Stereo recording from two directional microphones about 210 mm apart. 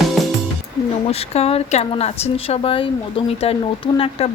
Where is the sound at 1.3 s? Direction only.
30° left (ahead or behind).